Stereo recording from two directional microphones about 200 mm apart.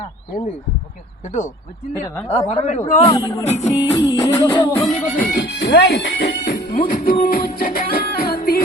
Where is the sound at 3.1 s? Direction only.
15° left (ahead or behind).